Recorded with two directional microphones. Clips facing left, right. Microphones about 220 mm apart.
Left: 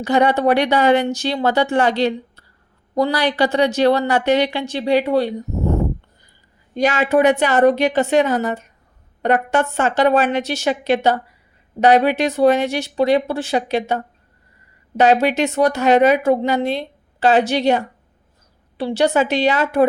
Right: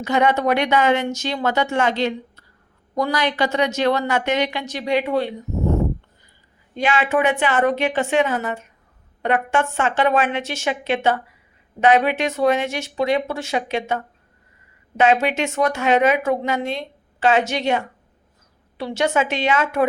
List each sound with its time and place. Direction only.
0.0 s a woman's voice: 35° left (ahead or behind)
6.7 s a woman's voice: 40° left (ahead or behind)